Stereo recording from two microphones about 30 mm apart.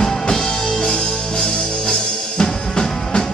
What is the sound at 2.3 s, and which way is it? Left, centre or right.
Drum, left.